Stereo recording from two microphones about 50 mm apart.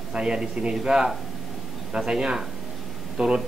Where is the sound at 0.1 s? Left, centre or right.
Centre.